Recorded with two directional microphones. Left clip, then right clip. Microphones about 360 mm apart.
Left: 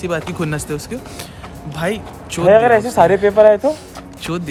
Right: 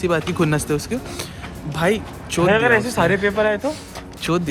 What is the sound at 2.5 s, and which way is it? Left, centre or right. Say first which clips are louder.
Speech: left 7 dB; left.